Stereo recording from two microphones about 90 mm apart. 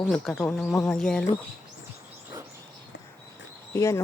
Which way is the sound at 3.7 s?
30° left (ahead or behind).